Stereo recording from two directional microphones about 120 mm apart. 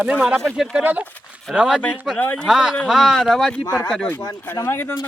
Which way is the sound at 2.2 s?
15° left (ahead or behind).